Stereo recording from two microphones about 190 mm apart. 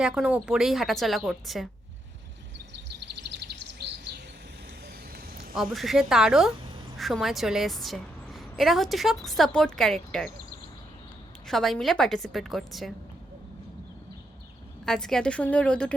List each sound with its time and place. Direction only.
0.0 s a woman's voice: 5° right (ahead or behind)
3.2 s bird: 60° right (ahead or behind)
5.1 s a sound: 50° right (ahead or behind)
5.5 s a woman's voice: centre (ahead or behind)
11.4 s a woman's voice: centre (ahead or behind)
14.8 s a woman's voice: 5° left (ahead or behind)